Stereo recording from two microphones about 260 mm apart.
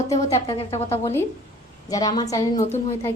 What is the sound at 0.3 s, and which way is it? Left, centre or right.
Speech, left.